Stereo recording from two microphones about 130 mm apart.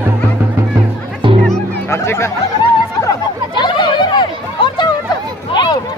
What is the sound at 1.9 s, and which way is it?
Chatter, 20° left (ahead or behind).